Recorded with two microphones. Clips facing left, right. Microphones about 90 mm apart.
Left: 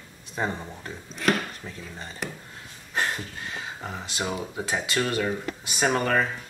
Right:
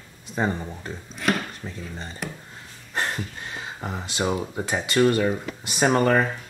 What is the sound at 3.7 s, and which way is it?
Speech, 15° right (ahead or behind).